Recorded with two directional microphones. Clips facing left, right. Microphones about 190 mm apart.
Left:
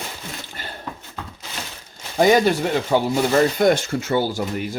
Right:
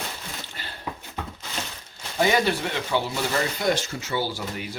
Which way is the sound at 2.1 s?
45° left (ahead or behind).